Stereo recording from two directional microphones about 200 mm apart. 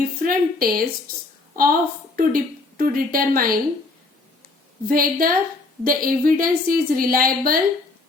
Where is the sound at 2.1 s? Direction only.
45° right (ahead or behind).